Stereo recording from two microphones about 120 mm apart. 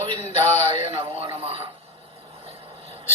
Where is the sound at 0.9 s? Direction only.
50° right (ahead or behind).